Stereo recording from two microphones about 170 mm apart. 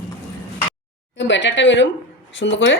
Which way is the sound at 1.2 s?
90° left.